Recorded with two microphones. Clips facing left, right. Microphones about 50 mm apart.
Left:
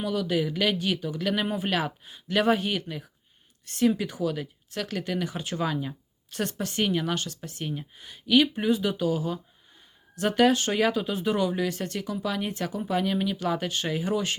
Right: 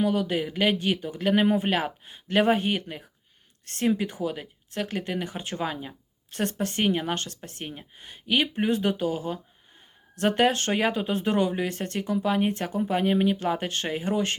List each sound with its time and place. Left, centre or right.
0.0 s speech: right